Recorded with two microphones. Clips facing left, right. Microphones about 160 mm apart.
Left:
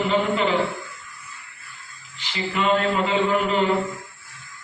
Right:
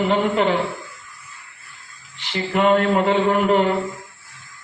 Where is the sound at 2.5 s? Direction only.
50° right (ahead or behind).